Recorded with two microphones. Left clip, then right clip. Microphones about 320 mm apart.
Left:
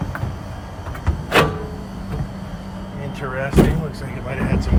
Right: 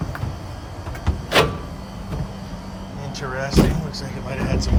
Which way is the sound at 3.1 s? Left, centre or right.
Centre.